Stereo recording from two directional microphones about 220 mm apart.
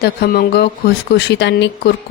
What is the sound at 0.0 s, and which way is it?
Speech, 45° left (ahead or behind).